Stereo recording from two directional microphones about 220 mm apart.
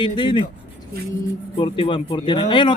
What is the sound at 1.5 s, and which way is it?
A man's voice, 20° left (ahead or behind).